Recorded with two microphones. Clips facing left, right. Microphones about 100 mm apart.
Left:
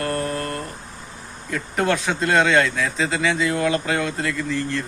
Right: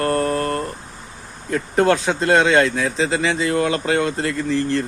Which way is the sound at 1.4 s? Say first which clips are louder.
Right 5 dB; 35° right (ahead or behind).